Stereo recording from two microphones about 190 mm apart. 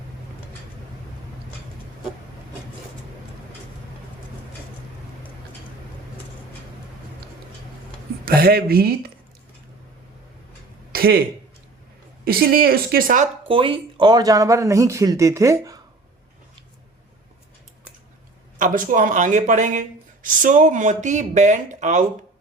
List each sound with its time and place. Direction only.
8.2 s speech: 55° right (ahead or behind)
10.9 s a sound: 55° right (ahead or behind)
12.2 s speech: 50° right (ahead or behind)
13.5 s speech: 30° right (ahead or behind)
18.6 s speech: 45° right (ahead or behind)